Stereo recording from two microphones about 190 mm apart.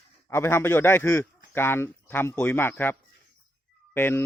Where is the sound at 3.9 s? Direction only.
10° left (ahead or behind).